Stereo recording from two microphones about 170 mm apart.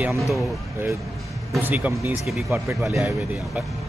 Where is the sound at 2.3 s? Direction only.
Centre (ahead or behind).